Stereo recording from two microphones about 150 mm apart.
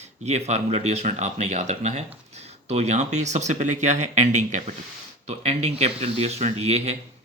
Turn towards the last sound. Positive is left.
turn(degrees=-45)  # may be behind; listen again after turning